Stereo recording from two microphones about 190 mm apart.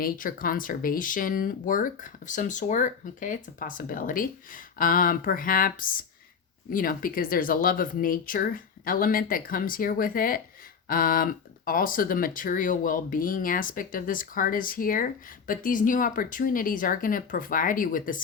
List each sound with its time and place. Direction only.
0.0 s speech: 50° left (ahead or behind)